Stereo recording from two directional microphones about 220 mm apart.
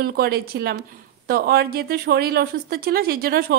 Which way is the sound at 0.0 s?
45° right (ahead or behind).